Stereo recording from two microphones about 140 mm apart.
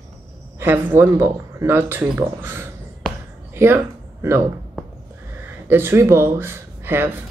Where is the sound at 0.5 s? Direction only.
15° right (ahead or behind).